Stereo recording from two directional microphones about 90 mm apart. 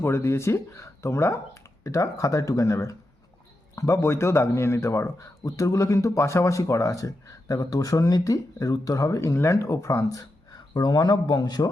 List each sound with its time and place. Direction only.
0.0 s speech: 30° left (ahead or behind)
10.8 s a man's voice: 50° left (ahead or behind)